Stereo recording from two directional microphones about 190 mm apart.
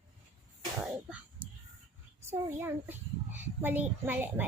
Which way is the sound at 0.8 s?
5° right (ahead or behind).